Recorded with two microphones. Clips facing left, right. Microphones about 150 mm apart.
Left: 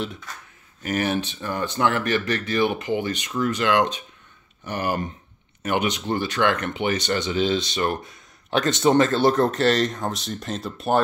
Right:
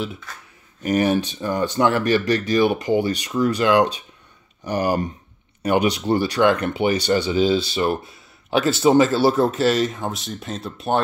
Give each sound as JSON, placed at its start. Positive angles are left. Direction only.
{"t": 0.8, "sound": "speech", "side_deg": -15}
{"t": 2.0, "sound": "speech", "side_deg": -40}
{"t": 2.5, "sound": "speech", "side_deg": -10}
{"t": 2.8, "sound": "speech", "side_deg": -35}
{"t": 6.4, "sound": "speech", "side_deg": -15}